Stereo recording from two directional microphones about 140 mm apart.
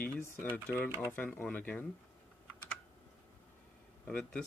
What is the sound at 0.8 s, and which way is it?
Speech, 20° right (ahead or behind).